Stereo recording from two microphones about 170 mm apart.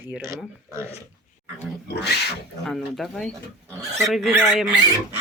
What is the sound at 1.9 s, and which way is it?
Speech, 80° left.